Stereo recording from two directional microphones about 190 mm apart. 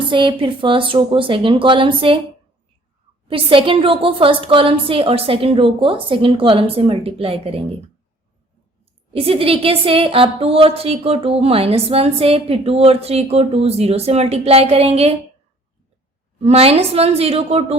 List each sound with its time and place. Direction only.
0.1 s a woman's voice: 25° right (ahead or behind)
3.2 s a woman's voice: 30° right (ahead or behind)
9.1 s a woman's voice: 30° right (ahead or behind)
16.4 s a woman's voice: 30° right (ahead or behind)